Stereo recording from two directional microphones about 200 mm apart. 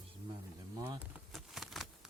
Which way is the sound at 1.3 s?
Centre (ahead or behind).